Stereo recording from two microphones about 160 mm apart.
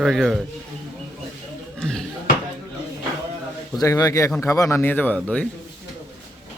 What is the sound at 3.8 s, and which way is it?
A man's voice, 20° left (ahead or behind).